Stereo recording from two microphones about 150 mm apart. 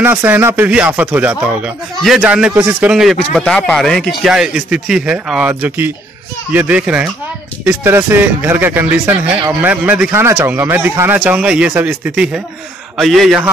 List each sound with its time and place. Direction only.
0.0 s a man's voice: 15° right (ahead or behind)